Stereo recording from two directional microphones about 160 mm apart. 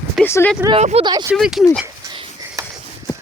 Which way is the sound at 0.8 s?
45° right (ahead or behind).